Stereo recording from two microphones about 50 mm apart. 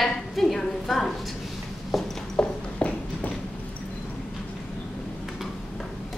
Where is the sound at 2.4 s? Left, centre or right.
Left.